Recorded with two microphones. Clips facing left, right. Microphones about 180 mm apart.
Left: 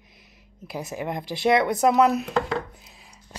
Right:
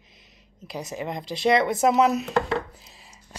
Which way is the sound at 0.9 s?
10° left (ahead or behind).